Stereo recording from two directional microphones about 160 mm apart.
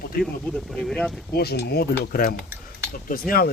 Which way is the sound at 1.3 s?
80° left.